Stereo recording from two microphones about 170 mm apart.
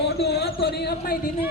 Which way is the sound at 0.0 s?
70° left (ahead or behind).